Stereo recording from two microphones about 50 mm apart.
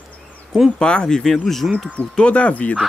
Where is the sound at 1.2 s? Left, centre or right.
Centre.